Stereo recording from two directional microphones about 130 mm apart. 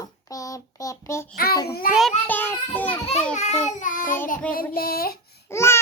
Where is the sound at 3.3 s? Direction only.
60° left (ahead or behind).